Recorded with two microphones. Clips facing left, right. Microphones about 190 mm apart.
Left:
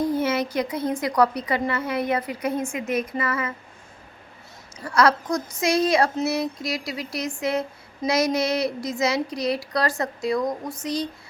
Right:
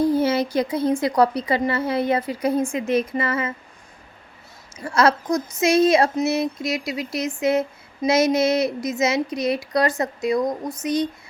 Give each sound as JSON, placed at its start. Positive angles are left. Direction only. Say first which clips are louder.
{"t": 0.0, "sound": "a woman's voice", "louder": "right 4 dB", "side_deg": -30}
{"t": 4.8, "sound": "a woman's voice", "louder": "right 1 dB", "side_deg": -25}